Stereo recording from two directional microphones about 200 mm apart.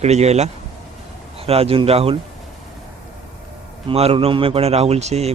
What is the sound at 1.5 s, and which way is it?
Speech, 30° right (ahead or behind).